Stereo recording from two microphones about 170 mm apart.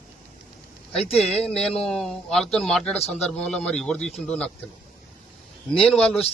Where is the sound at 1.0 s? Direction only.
35° left (ahead or behind).